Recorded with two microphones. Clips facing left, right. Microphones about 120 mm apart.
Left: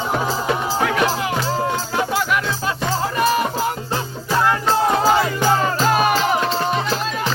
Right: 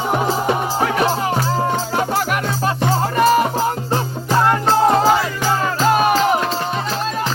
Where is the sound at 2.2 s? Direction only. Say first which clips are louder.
Right 1 dB; 50° right (ahead or behind).